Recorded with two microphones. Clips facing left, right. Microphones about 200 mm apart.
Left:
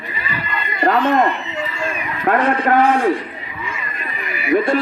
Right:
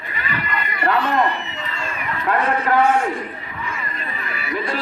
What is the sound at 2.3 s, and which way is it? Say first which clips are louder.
Speech: left 4 dB; 50° left (ahead or behind).